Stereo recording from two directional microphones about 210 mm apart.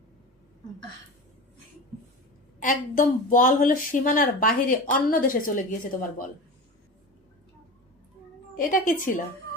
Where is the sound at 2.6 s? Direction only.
40° left (ahead or behind).